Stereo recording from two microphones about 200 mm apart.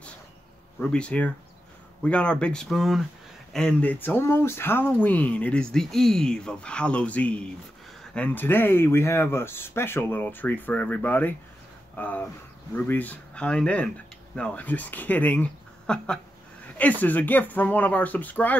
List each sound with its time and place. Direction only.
0.7 s speech: 5° left (ahead or behind)